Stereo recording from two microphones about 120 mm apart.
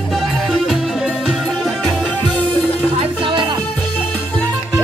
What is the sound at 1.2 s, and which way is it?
Music, 5° right (ahead or behind).